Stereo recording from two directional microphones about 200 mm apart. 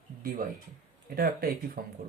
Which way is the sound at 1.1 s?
50° right (ahead or behind).